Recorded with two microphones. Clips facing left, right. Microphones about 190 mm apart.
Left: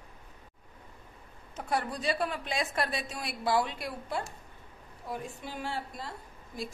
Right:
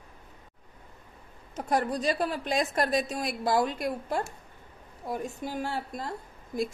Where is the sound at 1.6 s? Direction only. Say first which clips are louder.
Right 5 dB; 40° right (ahead or behind).